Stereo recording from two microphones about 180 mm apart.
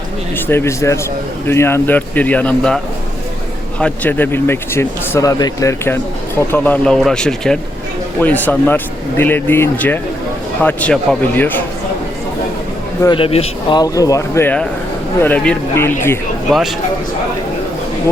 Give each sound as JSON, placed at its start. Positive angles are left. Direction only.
{"t": 0.3, "sound": "speech", "side_deg": 10}
{"t": 13.0, "sound": "speech", "side_deg": 25}